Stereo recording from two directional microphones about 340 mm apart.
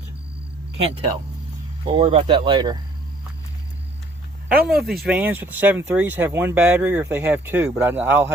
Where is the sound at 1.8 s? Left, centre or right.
Centre.